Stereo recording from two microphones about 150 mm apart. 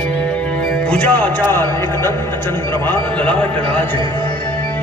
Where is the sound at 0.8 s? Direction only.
10° left (ahead or behind).